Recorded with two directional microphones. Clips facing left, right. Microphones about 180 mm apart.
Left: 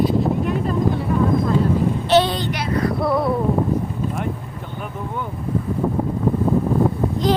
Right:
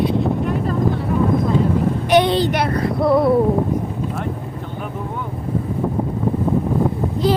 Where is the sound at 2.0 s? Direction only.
15° right (ahead or behind).